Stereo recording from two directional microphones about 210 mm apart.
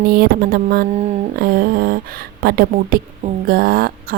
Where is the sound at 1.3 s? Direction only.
45° right (ahead or behind).